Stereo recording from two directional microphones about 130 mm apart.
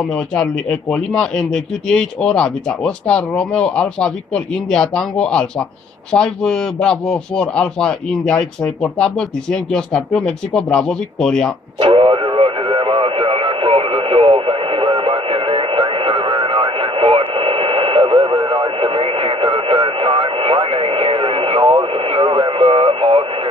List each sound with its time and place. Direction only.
0.3 s a man's voice: 5° left (ahead or behind)
11.8 s radio: 45° right (ahead or behind)